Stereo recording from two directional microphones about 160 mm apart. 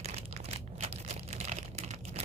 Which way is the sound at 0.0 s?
40° right (ahead or behind).